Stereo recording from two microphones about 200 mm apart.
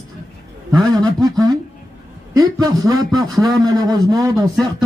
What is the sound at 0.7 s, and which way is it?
Speech, 20° right (ahead or behind).